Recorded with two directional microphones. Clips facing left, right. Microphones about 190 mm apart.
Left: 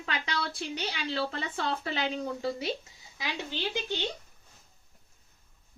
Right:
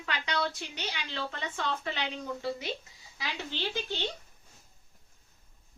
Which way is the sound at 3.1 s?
15° left (ahead or behind).